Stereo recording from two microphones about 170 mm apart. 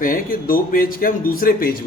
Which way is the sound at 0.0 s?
55° left (ahead or behind).